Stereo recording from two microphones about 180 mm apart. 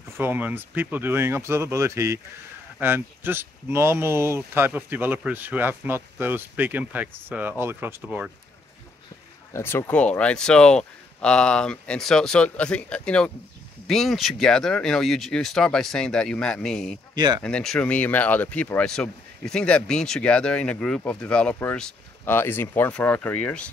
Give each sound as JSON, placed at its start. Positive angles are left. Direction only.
{"t": 0.2, "sound": "speech", "side_deg": -10}
{"t": 9.5, "sound": "speech", "side_deg": 15}
{"t": 17.1, "sound": "speech", "side_deg": -25}
{"t": 17.4, "sound": "speech", "side_deg": 5}